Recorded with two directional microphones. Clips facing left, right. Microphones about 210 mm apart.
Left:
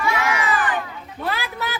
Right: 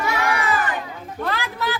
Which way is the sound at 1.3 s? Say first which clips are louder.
Right 2 dB; 10° left (ahead or behind).